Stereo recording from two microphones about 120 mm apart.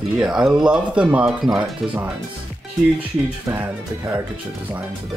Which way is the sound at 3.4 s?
15° right (ahead or behind).